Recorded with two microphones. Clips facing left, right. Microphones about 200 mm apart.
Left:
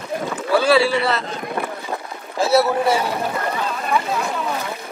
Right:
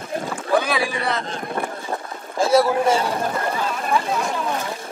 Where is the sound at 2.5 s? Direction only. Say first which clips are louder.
Even; 5° left (ahead or behind).